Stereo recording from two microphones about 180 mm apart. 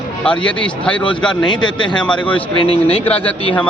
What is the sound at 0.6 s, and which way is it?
Speech, 5° left (ahead or behind).